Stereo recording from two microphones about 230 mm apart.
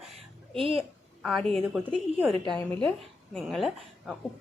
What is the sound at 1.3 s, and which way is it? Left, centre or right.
Speech, centre.